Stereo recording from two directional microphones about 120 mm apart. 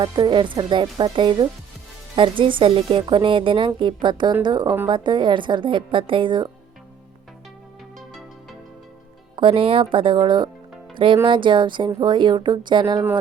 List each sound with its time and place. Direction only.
0.0 s a woman's voice: 40° right (ahead or behind)
9.3 s a woman's voice: 45° right (ahead or behind)